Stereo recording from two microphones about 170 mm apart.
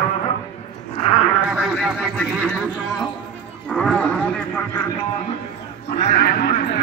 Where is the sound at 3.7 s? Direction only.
5° left (ahead or behind).